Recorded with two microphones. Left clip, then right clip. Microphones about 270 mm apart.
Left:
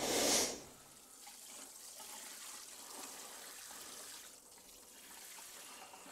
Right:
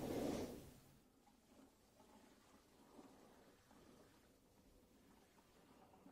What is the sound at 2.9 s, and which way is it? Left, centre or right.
Water, centre.